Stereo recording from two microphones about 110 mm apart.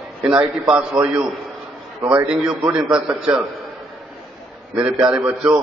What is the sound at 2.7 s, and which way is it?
Speech, 10° right (ahead or behind).